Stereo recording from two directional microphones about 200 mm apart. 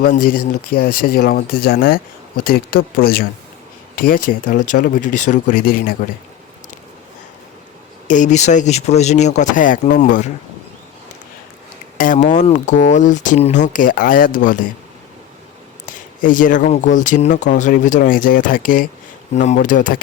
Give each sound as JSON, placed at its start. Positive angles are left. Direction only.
{"t": 0.0, "sound": "speech", "side_deg": 45}
{"t": 8.0, "sound": "speech", "side_deg": 40}
{"t": 11.9, "sound": "speech", "side_deg": 40}
{"t": 15.9, "sound": "speech", "side_deg": 40}